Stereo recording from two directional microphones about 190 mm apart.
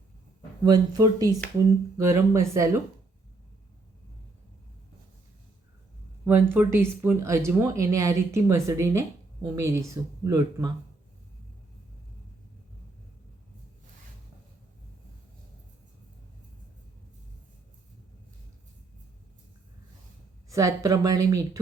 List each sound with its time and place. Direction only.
0.6 s speech: 20° right (ahead or behind)
6.5 s speech: 10° right (ahead or behind)
20.5 s speech: 15° right (ahead or behind)